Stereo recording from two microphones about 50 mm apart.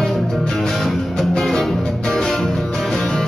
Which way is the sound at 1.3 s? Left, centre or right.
Centre.